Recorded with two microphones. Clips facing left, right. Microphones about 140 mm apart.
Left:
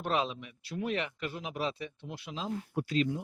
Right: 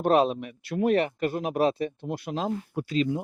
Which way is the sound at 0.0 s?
45° right (ahead or behind).